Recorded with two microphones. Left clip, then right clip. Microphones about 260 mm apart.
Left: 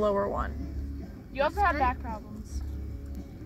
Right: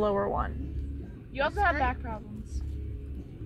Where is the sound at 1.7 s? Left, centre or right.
Right.